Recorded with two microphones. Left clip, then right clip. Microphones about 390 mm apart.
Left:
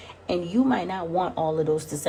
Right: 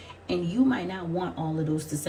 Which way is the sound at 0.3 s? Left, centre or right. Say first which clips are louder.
Left 2 dB; centre.